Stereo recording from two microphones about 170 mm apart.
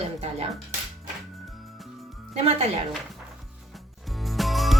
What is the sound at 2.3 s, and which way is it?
Speech, 35° right (ahead or behind).